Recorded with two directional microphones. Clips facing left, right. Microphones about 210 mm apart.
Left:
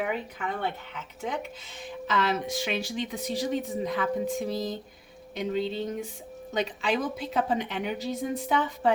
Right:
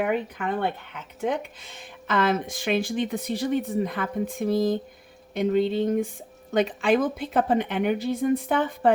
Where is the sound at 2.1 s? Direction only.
50° right (ahead or behind).